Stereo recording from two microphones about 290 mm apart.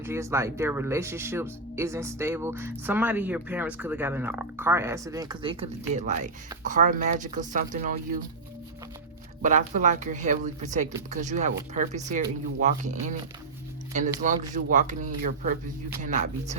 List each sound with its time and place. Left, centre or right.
0.0 s speech: centre; by 8.2 s right
9.4 s speech: right